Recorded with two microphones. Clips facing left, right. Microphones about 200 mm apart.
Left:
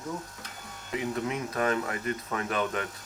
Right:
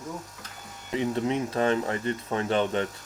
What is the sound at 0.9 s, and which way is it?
Speech, 30° right (ahead or behind).